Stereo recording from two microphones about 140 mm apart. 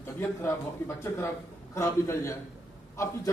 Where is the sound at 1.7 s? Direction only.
20° left (ahead or behind).